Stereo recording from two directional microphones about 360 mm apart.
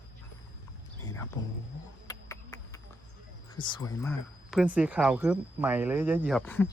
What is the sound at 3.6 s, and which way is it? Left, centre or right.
Speech, centre.